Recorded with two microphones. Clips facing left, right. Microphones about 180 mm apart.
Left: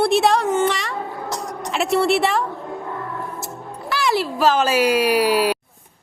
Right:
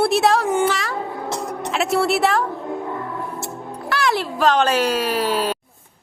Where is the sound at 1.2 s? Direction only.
25° right (ahead or behind).